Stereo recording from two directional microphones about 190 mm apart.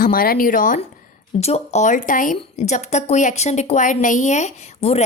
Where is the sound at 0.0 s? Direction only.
50° left (ahead or behind).